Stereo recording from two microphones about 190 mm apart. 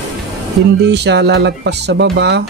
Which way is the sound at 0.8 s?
60° right (ahead or behind).